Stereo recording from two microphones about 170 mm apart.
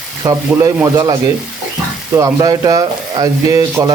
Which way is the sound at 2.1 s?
20° right (ahead or behind).